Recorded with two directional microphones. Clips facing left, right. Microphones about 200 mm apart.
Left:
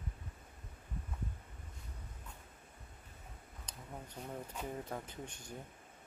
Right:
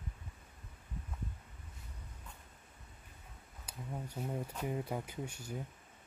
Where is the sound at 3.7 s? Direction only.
10° right (ahead or behind).